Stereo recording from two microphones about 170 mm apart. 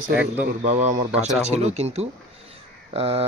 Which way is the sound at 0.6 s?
40° right (ahead or behind).